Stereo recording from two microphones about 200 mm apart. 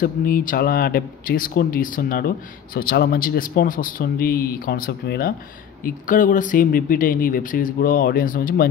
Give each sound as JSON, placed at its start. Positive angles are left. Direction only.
{"t": 0.0, "sound": "speech", "side_deg": 45}